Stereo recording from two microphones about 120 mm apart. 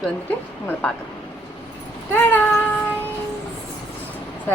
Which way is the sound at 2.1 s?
15° left (ahead or behind).